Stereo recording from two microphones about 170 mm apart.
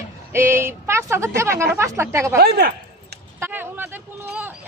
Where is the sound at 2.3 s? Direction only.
65° right (ahead or behind).